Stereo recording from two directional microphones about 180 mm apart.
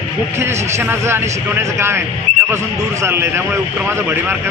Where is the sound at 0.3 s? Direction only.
15° right (ahead or behind).